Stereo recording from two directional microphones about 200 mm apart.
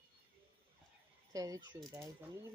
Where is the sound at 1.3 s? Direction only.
15° right (ahead or behind).